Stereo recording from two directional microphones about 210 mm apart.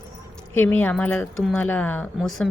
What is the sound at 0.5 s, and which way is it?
Speech, 10° left (ahead or behind).